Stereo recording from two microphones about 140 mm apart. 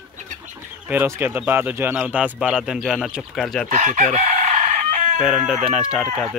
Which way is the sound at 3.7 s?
60° right (ahead or behind).